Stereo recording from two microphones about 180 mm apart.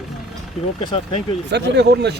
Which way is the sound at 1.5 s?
70° right (ahead or behind).